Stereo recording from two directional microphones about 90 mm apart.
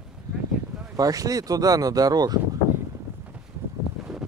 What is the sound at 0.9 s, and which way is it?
Speech, 40° right (ahead or behind).